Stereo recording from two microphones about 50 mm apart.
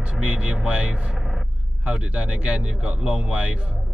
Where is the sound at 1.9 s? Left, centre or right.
Right.